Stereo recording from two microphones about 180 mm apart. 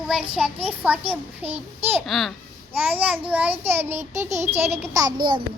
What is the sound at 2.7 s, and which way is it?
A child's voice, 10° right (ahead or behind).